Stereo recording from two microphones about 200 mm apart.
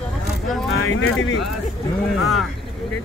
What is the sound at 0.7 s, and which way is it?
Speech, 90° left.